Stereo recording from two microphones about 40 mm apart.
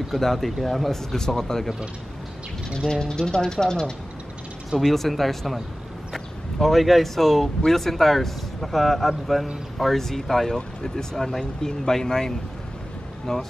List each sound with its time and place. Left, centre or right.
0.1 s speech: centre
2.9 s speech: centre
4.7 s speech: centre